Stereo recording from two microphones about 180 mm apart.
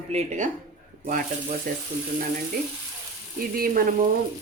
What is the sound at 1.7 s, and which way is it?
Frying, 50° right (ahead or behind).